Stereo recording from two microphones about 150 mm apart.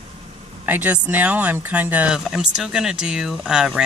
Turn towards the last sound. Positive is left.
turn(degrees=-5)  # may be behind; listen again after turning